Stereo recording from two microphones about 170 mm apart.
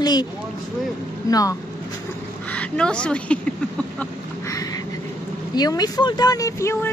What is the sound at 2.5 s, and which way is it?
Speech, 5° left (ahead or behind).